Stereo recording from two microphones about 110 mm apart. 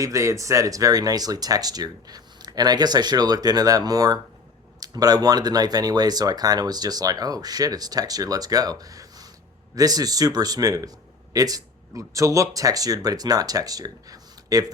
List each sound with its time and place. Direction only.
0.0 s speech: 30° right (ahead or behind)